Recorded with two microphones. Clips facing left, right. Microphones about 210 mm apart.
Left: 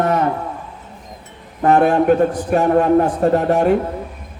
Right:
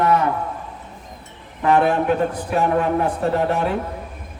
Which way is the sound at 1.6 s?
45° left (ahead or behind).